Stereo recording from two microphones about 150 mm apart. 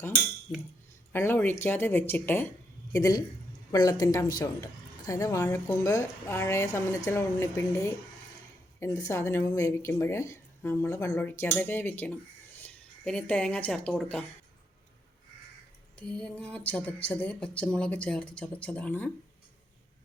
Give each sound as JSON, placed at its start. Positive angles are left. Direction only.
{"t": 1.1, "sound": "speech", "side_deg": 15}
{"t": 2.9, "sound": "a woman's voice", "side_deg": 25}
{"t": 16.0, "sound": "speech", "side_deg": 5}